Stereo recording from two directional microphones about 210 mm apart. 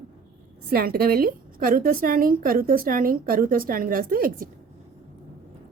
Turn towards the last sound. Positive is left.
turn(degrees=-40)  # may be behind; listen again after turning